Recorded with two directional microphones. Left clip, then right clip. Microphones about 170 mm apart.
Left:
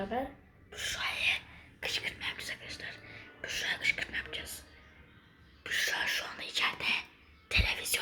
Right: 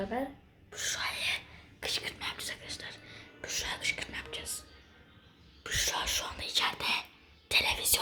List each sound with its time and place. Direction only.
0.7 s whispering: 20° right (ahead or behind)
5.6 s speech: 20° right (ahead or behind)